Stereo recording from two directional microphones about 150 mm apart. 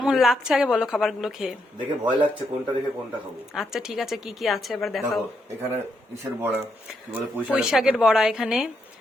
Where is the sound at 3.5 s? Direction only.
Centre (ahead or behind).